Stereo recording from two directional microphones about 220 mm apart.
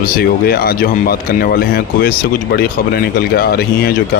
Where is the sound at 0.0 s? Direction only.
45° left (ahead or behind).